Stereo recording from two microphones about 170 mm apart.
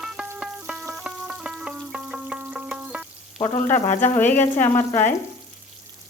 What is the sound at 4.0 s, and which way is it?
Frying, 10° left (ahead or behind).